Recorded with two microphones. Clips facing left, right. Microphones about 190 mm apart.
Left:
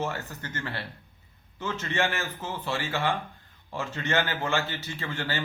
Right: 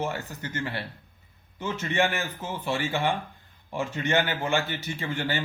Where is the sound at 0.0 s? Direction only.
15° right (ahead or behind).